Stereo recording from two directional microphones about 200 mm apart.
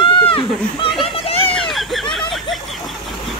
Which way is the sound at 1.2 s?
30° left (ahead or behind).